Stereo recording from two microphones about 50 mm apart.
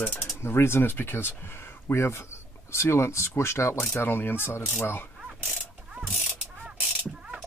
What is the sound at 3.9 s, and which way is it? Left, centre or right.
Speech, left.